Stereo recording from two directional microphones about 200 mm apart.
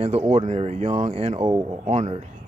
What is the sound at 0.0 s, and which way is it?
Speech, 30° right (ahead or behind).